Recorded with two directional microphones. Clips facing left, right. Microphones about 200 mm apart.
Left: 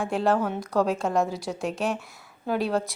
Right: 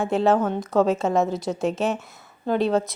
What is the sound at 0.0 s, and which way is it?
A woman's voice, 5° right (ahead or behind).